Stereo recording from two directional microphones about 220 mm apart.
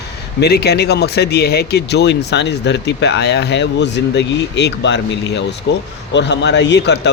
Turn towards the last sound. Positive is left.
turn(degrees=50)  # may be behind; listen again after turning